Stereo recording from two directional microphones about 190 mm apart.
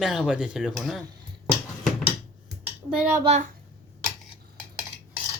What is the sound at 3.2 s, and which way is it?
Speech, 35° right (ahead or behind).